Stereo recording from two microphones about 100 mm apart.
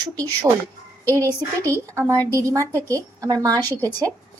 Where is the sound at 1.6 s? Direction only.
30° right (ahead or behind).